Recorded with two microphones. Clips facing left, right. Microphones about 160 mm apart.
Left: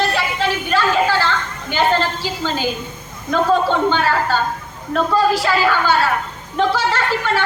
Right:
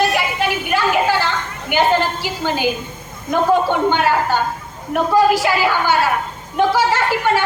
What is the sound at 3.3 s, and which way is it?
A woman's voice, 15° right (ahead or behind).